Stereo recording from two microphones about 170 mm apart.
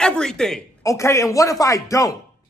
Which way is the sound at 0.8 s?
15° left (ahead or behind).